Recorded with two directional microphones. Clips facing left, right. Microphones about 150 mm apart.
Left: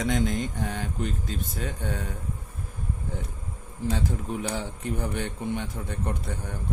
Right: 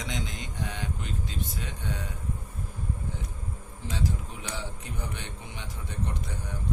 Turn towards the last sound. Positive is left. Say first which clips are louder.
# left 4 dB
turn(degrees=55)  # may be behind; listen again after turning